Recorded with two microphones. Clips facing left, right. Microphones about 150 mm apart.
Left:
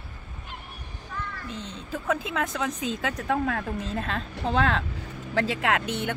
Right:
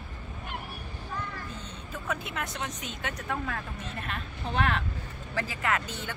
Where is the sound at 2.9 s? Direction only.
85° left.